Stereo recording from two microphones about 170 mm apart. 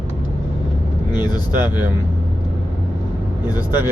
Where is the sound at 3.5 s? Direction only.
10° right (ahead or behind).